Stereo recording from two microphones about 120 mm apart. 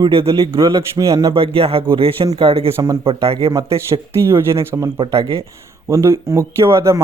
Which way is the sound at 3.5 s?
25° right (ahead or behind).